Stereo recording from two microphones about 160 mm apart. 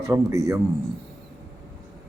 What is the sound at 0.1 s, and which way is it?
Speech, 20° right (ahead or behind).